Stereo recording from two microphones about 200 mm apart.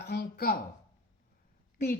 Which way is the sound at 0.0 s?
55° left (ahead or behind).